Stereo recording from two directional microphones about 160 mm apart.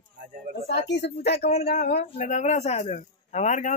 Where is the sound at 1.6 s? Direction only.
75° left (ahead or behind).